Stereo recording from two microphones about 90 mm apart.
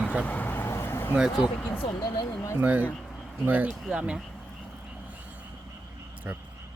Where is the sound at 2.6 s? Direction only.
15° right (ahead or behind).